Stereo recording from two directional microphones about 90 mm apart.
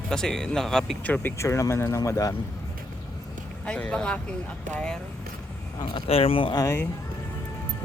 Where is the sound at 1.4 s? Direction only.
35° left (ahead or behind).